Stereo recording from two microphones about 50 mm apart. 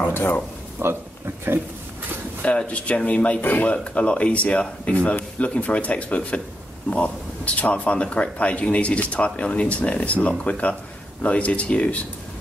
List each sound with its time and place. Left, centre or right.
0.1 s speech: left
0.7 s a man's voice: right
2.4 s speech: left
3.3 s speech: left
3.7 s speech: left